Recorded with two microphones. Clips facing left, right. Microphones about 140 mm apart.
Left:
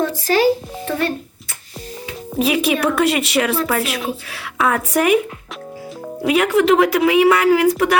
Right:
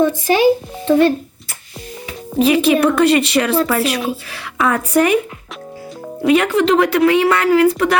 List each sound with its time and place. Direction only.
0.3 s speech: 15° right (ahead or behind)
2.3 s speech: 5° left (ahead or behind)
6.2 s speech: 5° left (ahead or behind)